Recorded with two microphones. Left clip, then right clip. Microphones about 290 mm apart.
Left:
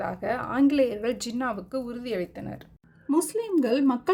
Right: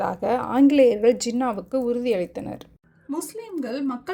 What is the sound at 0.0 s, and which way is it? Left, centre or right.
A woman's voice, centre.